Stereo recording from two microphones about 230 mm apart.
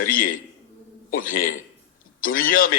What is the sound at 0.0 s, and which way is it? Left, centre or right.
A man's voice, left.